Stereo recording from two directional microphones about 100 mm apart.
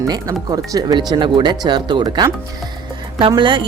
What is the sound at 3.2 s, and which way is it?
Speech, 55° right (ahead or behind).